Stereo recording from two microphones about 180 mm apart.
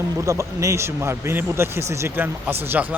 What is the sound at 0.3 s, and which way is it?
Speech, 15° right (ahead or behind).